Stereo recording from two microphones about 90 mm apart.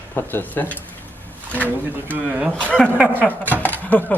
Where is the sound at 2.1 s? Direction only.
15° right (ahead or behind).